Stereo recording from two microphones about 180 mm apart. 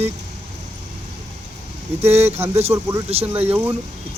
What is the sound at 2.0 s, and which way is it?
Speech, 35° right (ahead or behind).